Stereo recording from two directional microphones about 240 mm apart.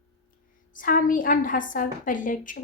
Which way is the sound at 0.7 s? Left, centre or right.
Left.